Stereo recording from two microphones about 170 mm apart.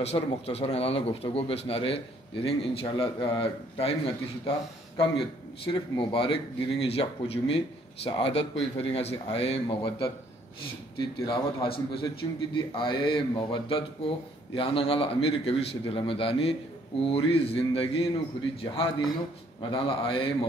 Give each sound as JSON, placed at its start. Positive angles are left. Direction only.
{"t": 0.0, "sound": "a man's voice", "side_deg": 35}
{"t": 19.7, "sound": "a man's voice", "side_deg": 30}